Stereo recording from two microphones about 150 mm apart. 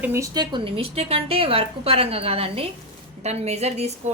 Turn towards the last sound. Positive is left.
turn(degrees=-45)  # may be behind; listen again after turning